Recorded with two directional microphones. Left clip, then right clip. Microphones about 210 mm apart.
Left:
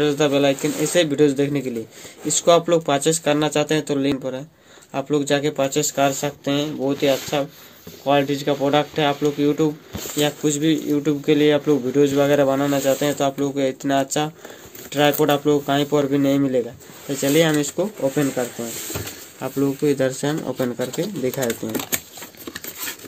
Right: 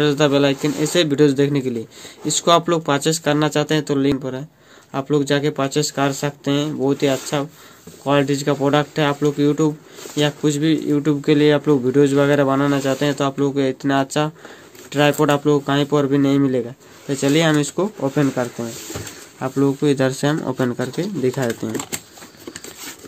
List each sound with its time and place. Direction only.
0.0 s speech: 50° right (ahead or behind)